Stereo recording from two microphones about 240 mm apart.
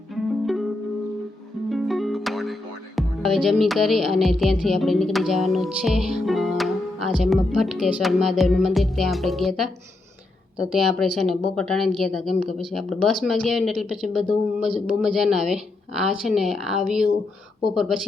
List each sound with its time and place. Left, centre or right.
0.1 s music: centre
1.7 s music: centre
10.7 s speech: centre